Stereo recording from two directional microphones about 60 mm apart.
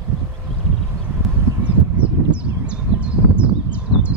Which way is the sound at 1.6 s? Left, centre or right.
Right.